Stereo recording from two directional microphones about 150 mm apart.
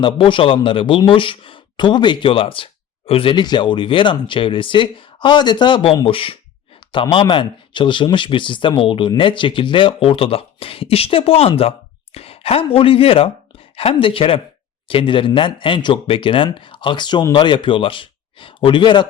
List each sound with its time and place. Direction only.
0.0 s speech: 35° left (ahead or behind)